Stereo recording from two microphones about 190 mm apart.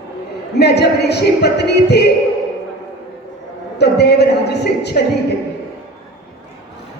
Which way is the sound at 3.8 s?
60° left (ahead or behind).